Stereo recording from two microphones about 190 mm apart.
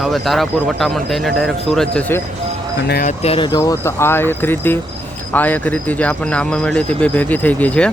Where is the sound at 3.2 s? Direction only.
30° left (ahead or behind).